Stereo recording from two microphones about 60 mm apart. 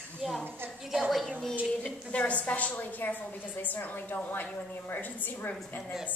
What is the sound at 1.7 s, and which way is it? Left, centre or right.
A woman's voice, left.